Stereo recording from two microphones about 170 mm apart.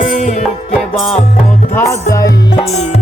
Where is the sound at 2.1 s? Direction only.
20° left (ahead or behind).